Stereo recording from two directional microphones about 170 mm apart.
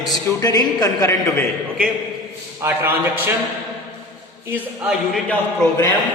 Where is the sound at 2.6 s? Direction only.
10° right (ahead or behind).